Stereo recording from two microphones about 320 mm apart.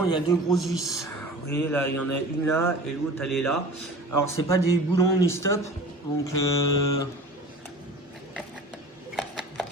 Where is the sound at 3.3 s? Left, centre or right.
Left.